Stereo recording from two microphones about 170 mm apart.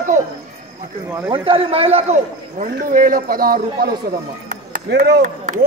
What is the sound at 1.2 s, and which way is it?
A man's voice, 30° right (ahead or behind).